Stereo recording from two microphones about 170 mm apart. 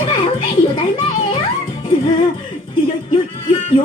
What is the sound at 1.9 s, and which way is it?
Music, 25° left (ahead or behind).